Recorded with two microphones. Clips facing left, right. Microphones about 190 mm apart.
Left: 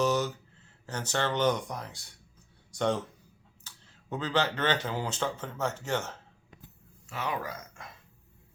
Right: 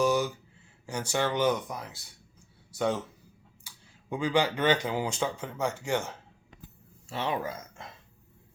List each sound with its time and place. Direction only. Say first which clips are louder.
0.0 s a sound: right 2 dB; 10° right (ahead or behind)
0.9 s speech: right 2 dB; 10° right (ahead or behind)
7.1 s speech: right 3 dB; 30° right (ahead or behind)